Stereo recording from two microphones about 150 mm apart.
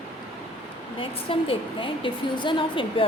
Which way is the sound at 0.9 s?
35° left (ahead or behind).